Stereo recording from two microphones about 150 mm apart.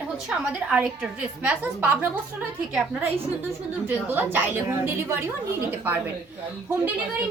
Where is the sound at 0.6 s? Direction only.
5° right (ahead or behind).